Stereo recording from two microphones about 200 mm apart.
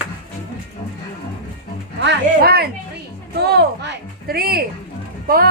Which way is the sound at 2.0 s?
55° right (ahead or behind).